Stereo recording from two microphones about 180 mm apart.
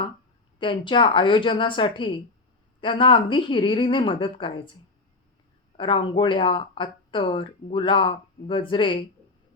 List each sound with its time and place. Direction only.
0.6 s speech: 25° left (ahead or behind)
5.7 s speech: 25° left (ahead or behind)